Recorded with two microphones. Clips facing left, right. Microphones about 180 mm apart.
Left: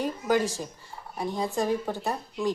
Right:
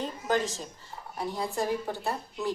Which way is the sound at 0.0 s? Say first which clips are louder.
Left 4 dB; 10° left (ahead or behind).